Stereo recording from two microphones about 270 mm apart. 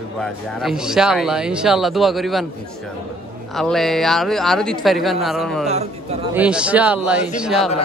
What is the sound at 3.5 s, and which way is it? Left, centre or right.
A man's voice, centre.